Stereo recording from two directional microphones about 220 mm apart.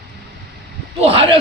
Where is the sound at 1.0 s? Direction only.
25° right (ahead or behind).